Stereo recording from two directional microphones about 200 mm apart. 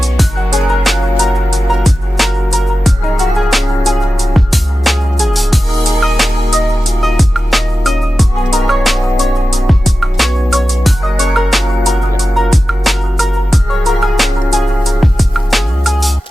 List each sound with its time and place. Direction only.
0.0 s music: centre (ahead or behind)